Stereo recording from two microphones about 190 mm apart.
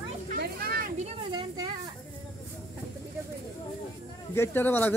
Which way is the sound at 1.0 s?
25° right (ahead or behind).